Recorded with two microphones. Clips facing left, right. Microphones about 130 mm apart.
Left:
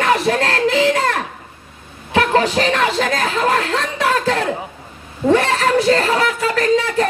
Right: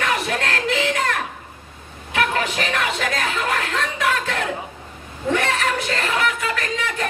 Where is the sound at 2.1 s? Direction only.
30° left (ahead or behind).